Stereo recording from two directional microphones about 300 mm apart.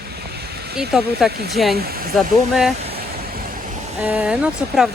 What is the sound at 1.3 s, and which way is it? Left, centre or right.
Speech, right.